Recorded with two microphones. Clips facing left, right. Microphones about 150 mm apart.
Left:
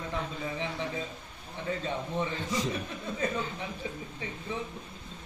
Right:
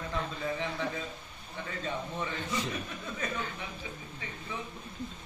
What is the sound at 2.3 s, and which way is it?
Speech, 40° left (ahead or behind).